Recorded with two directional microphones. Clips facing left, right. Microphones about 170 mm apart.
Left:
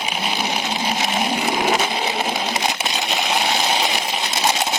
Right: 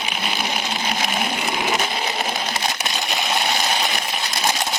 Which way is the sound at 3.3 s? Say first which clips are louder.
Left 2 dB; 20° left (ahead or behind).